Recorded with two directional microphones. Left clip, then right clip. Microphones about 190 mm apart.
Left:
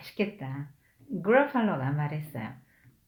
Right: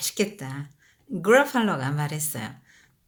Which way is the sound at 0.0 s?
35° right (ahead or behind).